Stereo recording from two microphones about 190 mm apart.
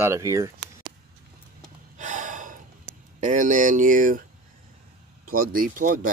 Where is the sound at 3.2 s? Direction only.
40° right (ahead or behind).